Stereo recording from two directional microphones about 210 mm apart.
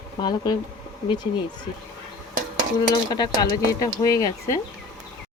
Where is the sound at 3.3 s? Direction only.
15° left (ahead or behind).